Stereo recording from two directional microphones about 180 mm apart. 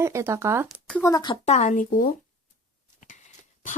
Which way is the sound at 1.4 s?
40° left (ahead or behind).